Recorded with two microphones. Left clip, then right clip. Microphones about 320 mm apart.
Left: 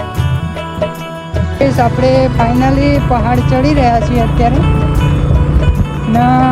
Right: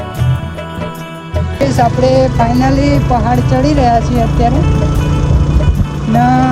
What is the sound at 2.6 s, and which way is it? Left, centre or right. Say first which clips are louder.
Speech: even; centre.